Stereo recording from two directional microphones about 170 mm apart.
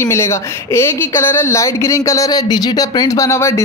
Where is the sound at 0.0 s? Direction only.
15° left (ahead or behind).